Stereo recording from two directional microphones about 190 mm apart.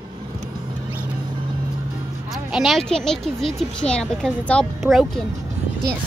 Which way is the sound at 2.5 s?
Centre (ahead or behind).